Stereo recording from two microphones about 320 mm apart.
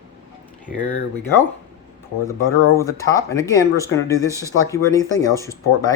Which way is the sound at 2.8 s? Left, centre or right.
Centre.